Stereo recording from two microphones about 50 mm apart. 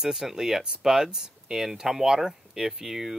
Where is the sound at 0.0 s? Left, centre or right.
Centre.